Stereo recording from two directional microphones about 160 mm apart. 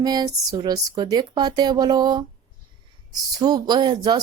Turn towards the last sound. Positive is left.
turn(degrees=-25)  # may be behind; listen again after turning